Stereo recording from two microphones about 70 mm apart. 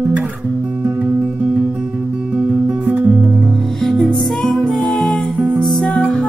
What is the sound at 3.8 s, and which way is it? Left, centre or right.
Music, centre.